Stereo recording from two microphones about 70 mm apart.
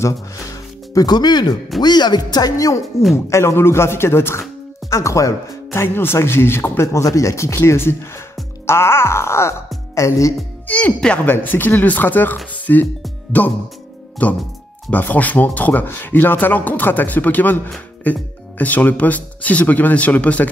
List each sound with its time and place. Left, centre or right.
0.0 s music: left
1.8 s speech: left
2.5 s speech: left
3.3 s speech: left
5.8 s groan: left
6.9 s speech: left
8.6 s groan: left
9.9 s speech: left
11.2 s speech: left